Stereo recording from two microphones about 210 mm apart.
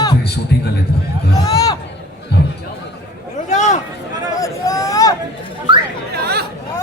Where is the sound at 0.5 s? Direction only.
50° left (ahead or behind).